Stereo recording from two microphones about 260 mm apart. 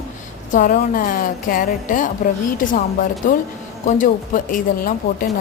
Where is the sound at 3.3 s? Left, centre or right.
Left.